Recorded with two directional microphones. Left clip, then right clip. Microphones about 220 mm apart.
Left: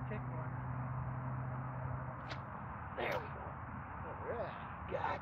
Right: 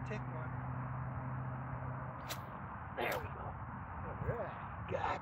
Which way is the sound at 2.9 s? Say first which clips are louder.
Right 1 dB; 35° right (ahead or behind).